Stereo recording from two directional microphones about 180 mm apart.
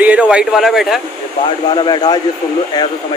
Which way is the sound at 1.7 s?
25° left (ahead or behind).